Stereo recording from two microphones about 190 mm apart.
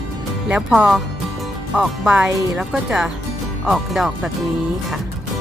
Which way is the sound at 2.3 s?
15° right (ahead or behind).